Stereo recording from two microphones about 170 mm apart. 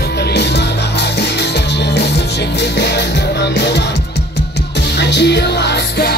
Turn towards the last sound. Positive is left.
turn(degrees=75)  # may be behind; listen again after turning